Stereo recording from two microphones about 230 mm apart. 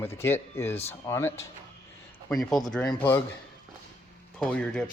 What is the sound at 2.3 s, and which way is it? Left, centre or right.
Speech, centre.